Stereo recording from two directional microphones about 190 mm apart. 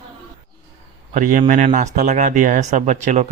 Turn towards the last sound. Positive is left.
turn(degrees=-40)  # may be behind; listen again after turning